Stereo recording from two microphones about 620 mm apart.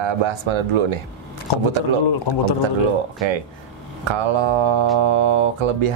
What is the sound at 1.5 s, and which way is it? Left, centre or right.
Speech, left.